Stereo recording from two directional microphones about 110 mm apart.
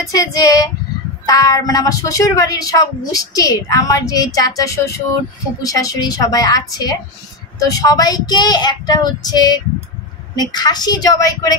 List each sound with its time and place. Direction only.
0.0 s speech: 30° left (ahead or behind)